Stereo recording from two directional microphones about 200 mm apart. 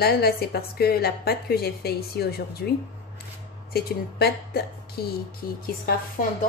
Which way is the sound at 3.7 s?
55° left (ahead or behind).